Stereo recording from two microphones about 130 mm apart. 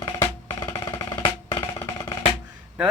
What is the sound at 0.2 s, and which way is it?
Music, 20° left (ahead or behind).